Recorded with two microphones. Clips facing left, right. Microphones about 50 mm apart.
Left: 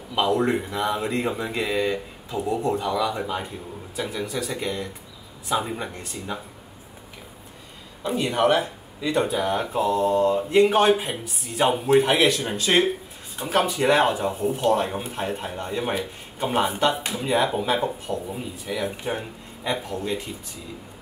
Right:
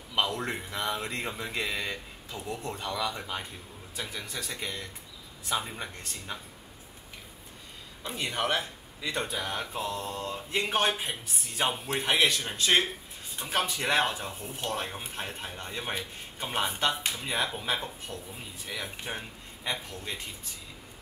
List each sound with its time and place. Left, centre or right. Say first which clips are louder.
0.1 s a sound: left 7 dB; centre
0.4 s speech: left 10 dB; centre
8.0 s speech: left 10 dB; centre